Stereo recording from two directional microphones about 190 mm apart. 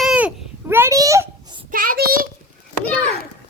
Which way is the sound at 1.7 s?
50° right (ahead or behind).